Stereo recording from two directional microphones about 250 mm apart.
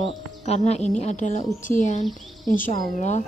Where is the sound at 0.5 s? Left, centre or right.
Left.